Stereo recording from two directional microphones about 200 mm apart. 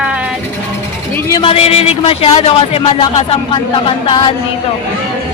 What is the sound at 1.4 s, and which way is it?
A man's voice, 30° left (ahead or behind).